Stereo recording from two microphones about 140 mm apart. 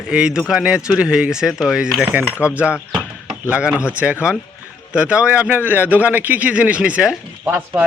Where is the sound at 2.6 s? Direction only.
10° right (ahead or behind).